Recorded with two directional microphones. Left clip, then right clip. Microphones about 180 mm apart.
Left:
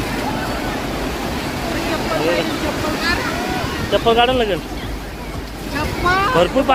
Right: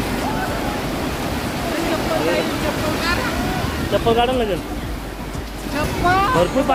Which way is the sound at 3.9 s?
5° right (ahead or behind).